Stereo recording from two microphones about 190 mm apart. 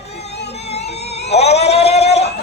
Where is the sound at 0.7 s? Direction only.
35° left (ahead or behind).